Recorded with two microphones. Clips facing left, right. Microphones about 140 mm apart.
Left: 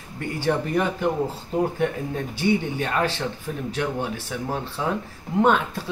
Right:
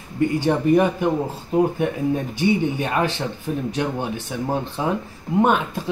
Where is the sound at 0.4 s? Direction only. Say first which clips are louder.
Right 4 dB; 15° right (ahead or behind).